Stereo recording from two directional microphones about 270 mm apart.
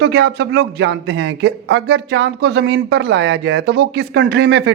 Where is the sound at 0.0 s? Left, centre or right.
Right.